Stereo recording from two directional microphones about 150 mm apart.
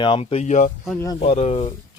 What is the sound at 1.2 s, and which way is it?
Speech, 45° left (ahead or behind).